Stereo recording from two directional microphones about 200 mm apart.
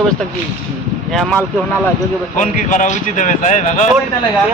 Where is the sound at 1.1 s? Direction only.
Centre (ahead or behind).